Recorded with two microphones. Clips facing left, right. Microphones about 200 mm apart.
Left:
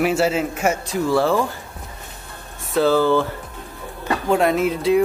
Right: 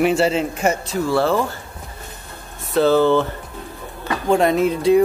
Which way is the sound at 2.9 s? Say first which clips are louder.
Right 2 dB; 20° right (ahead or behind).